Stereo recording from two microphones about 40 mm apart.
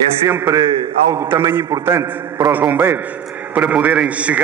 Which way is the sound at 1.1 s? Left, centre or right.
Right.